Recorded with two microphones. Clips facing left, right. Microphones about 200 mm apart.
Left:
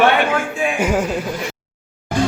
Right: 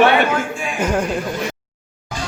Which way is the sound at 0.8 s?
5° left (ahead or behind).